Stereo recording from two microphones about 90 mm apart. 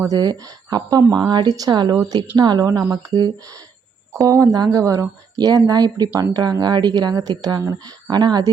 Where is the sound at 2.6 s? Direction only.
35° right (ahead or behind).